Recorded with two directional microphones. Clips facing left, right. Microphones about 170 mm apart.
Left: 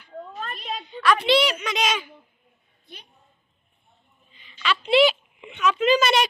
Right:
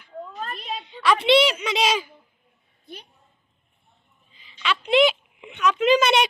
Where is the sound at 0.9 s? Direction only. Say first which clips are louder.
Right 2 dB; 25° right (ahead or behind).